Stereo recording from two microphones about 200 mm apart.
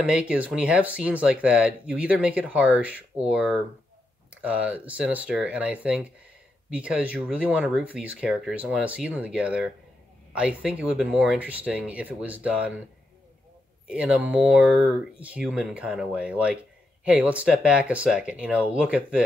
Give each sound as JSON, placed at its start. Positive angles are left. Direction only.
{"t": 0.0, "sound": "speech", "side_deg": -5}
{"t": 13.8, "sound": "speech", "side_deg": -5}